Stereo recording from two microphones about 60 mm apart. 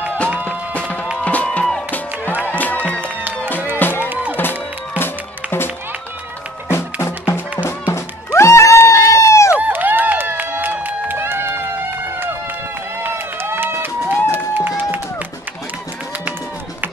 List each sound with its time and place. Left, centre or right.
0.5 s music: left
2.4 s music: left
4.1 s music: right
4.4 s music: left
6.7 s music: left
8.8 s a sound: left
9.6 s run: right
13.0 s a sound: right
14.8 s music: right